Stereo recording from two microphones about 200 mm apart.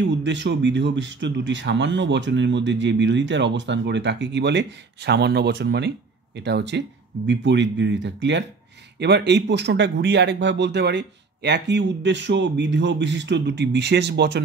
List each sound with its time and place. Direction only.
0.0 s speech: 65° right (ahead or behind)